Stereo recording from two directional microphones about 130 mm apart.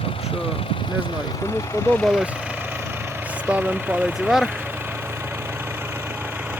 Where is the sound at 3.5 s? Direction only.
10° right (ahead or behind).